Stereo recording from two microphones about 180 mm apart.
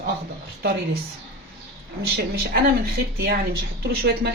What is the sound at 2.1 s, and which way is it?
Speech, 60° right (ahead or behind).